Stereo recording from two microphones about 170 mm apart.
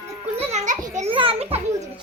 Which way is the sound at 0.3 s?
45° right (ahead or behind).